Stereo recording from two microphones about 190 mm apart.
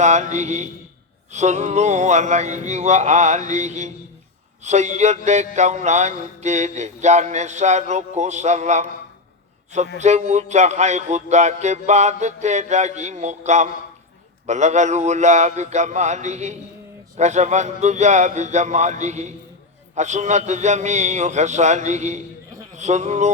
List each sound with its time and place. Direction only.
0.0 s music: 35° right (ahead or behind)
10.0 s music: 35° right (ahead or behind)
22.7 s speech: 40° right (ahead or behind)